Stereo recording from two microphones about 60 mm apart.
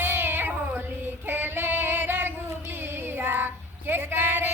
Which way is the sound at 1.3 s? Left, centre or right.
Right.